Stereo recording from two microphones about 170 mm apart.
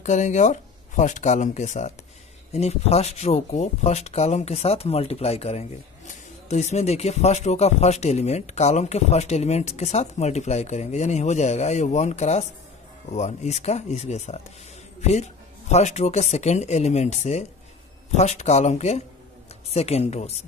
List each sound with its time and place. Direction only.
0.0 s speech: 45° left (ahead or behind)